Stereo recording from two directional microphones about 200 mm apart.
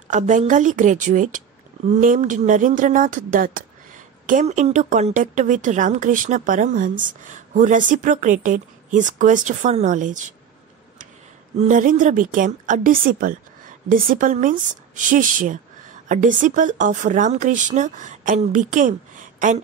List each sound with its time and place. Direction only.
0.1 s a woman's voice: 40° right (ahead or behind)
11.5 s a woman's voice: 40° right (ahead or behind)